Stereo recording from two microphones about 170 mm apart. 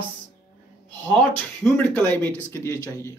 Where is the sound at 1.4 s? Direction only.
10° left (ahead or behind).